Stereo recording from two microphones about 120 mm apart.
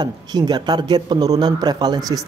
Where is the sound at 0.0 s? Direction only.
35° right (ahead or behind).